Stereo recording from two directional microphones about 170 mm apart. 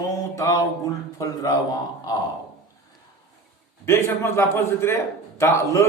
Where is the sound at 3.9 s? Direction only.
15° left (ahead or behind).